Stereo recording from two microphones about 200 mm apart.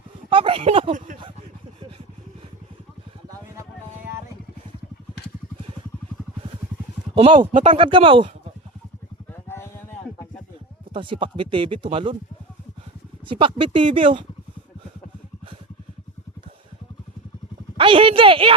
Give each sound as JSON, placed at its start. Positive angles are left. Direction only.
{"t": 0.3, "sound": "speech", "side_deg": -25}
{"t": 7.3, "sound": "speech", "side_deg": -35}
{"t": 7.7, "sound": "speech", "side_deg": -25}
{"t": 10.9, "sound": "speech", "side_deg": -25}
{"t": 13.2, "sound": "speech", "side_deg": -25}
{"t": 17.7, "sound": "a sound", "side_deg": -25}